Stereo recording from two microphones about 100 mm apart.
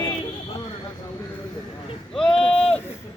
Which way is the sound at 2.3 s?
65° left (ahead or behind).